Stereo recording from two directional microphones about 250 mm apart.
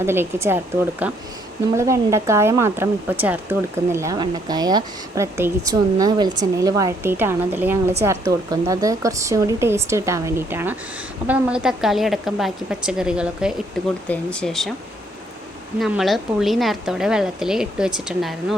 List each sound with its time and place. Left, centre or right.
0.0 s a woman's voice: centre
15.8 s a woman's voice: centre